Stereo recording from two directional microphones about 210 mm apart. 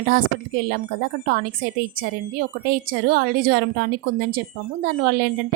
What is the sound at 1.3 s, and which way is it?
A woman's voice, 45° right (ahead or behind).